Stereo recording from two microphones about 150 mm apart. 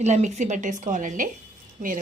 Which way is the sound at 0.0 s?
50° right (ahead or behind).